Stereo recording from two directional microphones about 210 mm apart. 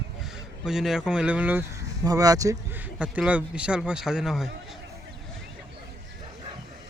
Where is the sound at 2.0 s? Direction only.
15° right (ahead or behind).